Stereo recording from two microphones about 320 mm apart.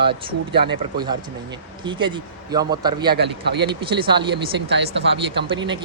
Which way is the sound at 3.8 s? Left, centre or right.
Centre.